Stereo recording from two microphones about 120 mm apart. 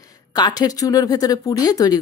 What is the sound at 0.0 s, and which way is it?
A woman's voice, 30° left (ahead or behind).